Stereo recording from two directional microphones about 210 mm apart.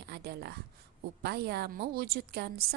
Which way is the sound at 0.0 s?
50° right (ahead or behind).